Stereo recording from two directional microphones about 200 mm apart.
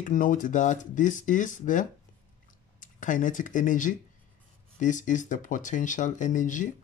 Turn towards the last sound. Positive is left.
turn(degrees=40)  # may be behind; listen again after turning